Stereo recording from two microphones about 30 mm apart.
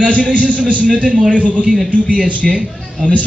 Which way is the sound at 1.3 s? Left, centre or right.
Right.